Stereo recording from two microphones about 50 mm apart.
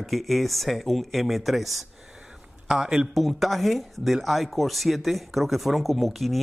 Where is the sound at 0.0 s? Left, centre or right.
Centre.